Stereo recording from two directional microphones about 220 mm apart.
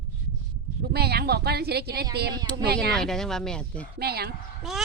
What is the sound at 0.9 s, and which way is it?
Speech, 45° right (ahead or behind).